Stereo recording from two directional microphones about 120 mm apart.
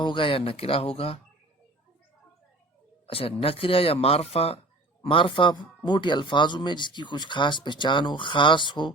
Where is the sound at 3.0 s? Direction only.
50° left (ahead or behind).